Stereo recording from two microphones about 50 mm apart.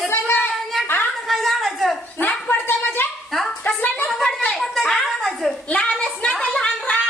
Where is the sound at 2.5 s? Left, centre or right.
Left.